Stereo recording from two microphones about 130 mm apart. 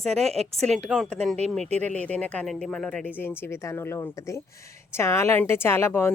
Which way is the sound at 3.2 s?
15° left (ahead or behind).